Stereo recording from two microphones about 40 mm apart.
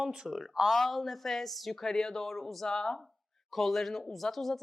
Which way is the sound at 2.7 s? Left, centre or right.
Centre.